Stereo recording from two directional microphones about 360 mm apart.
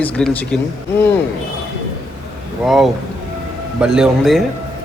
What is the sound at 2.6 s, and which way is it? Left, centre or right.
A man's voice, centre.